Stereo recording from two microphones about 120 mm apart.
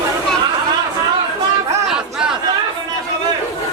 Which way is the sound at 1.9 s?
5° right (ahead or behind).